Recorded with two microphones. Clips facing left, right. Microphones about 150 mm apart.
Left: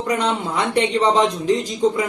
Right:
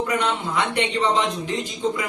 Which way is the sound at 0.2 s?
35° left (ahead or behind).